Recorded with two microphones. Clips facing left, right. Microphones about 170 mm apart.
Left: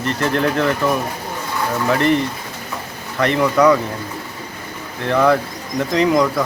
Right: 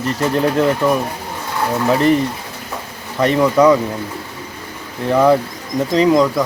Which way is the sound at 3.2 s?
20° right (ahead or behind).